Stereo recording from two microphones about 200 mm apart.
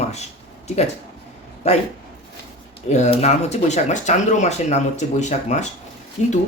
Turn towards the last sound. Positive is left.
turn(degrees=35)  # may be behind; listen again after turning